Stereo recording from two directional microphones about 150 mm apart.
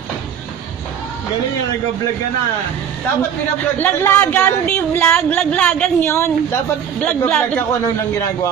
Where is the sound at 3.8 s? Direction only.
15° left (ahead or behind).